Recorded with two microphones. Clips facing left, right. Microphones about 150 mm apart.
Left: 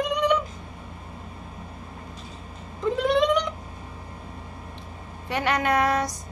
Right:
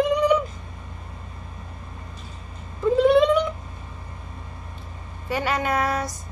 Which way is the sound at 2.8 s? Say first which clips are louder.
Right 5 dB; 5° right (ahead or behind).